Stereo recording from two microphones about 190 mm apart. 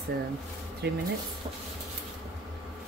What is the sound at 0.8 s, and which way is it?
Speech, 60° right (ahead or behind).